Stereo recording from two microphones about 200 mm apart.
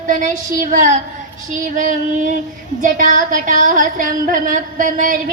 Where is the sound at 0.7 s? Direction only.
40° right (ahead or behind).